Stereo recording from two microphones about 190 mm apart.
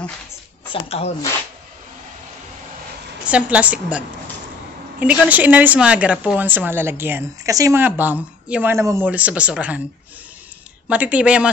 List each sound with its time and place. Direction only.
0.7 s speech: 30° left (ahead or behind)
3.3 s a woman's voice: 5° right (ahead or behind)
5.0 s a woman's voice: 5° right (ahead or behind)
10.9 s a woman's voice: 5° right (ahead or behind)